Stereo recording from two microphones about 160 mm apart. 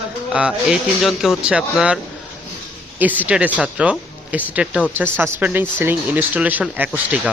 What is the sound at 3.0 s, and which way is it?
Speech, 10° right (ahead or behind).